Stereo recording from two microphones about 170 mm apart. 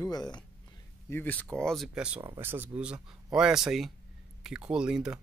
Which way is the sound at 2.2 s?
15° right (ahead or behind).